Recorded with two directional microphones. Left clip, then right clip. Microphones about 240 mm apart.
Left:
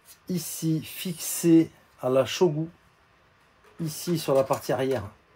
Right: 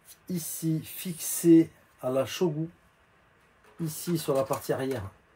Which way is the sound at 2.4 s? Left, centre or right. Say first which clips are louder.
Left 6 dB; left.